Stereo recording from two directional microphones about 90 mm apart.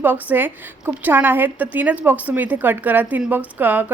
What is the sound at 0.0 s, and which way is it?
A woman's voice, 20° right (ahead or behind).